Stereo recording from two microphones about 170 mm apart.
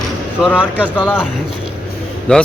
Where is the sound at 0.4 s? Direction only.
10° left (ahead or behind).